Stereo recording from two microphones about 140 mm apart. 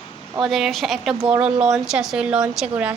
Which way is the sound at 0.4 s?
Centre (ahead or behind).